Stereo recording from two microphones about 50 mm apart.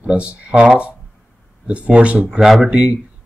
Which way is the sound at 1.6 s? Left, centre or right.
Right.